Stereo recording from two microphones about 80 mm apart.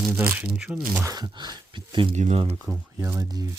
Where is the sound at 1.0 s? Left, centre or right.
Right.